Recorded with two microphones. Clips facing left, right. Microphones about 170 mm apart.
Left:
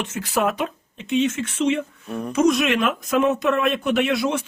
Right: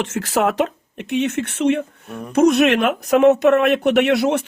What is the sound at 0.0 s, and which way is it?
Speech, 85° right.